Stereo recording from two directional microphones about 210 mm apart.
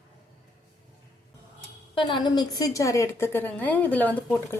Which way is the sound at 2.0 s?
20° left (ahead or behind).